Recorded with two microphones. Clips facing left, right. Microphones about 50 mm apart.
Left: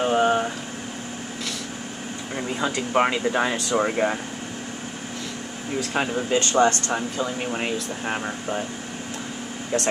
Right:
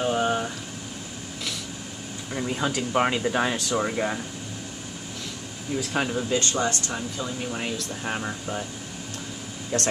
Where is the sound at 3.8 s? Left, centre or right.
Centre.